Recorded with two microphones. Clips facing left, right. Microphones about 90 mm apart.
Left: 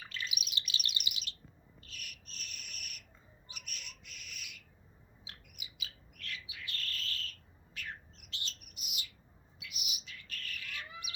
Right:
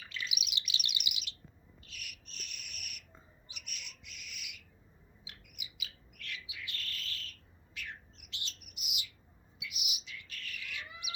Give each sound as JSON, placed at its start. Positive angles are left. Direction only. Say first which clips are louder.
{"t": 0.1, "sound": "chirp", "louder": "right 1 dB", "side_deg": 40}
{"t": 1.8, "sound": "cricket", "louder": "even", "side_deg": 40}
{"t": 3.5, "sound": "bird", "louder": "left 1 dB", "side_deg": 40}